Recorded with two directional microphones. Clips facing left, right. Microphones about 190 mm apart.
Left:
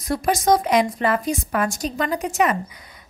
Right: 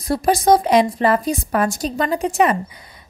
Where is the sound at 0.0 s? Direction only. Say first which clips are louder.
Right 4 dB; 30° right (ahead or behind).